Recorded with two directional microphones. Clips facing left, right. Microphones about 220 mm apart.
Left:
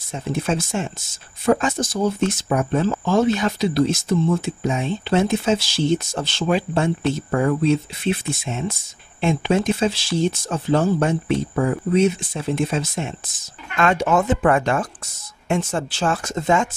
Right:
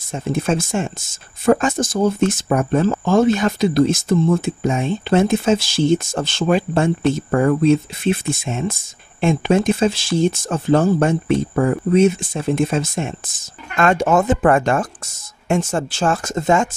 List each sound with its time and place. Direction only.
0.1 s speech: 50° right (ahead or behind)